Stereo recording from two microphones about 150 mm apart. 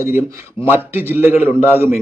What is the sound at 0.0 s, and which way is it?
A man's voice, 15° right (ahead or behind).